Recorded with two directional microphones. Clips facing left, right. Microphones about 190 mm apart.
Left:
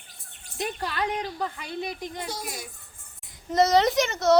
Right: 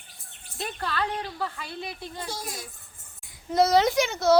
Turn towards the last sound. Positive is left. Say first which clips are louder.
# even
turn(degrees=0)  # may be behind; listen again after turning